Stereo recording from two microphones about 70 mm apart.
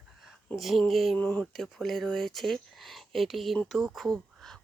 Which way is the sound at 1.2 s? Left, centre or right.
Left.